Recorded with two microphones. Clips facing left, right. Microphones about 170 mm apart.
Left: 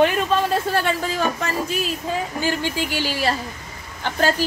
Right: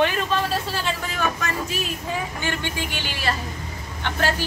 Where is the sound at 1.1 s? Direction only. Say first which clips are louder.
Left 3 dB; 30° left (ahead or behind).